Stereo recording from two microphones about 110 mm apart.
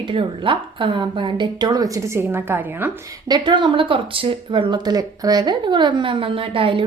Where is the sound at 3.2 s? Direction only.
40° right (ahead or behind).